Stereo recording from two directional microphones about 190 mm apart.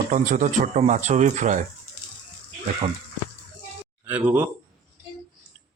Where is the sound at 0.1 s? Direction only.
40° right (ahead or behind).